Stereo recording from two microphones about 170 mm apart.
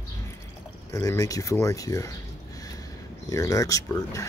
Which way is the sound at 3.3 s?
20° left (ahead or behind).